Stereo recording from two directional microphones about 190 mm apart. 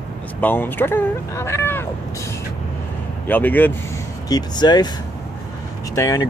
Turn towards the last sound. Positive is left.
turn(degrees=20)  # may be behind; listen again after turning